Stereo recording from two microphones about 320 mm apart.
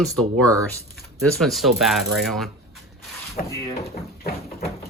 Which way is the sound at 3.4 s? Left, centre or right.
Left.